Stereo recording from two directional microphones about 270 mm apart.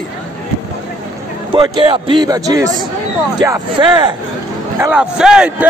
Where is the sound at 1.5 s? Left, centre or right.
Centre.